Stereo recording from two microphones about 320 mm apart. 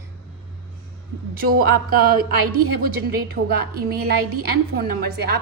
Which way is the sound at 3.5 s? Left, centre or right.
Right.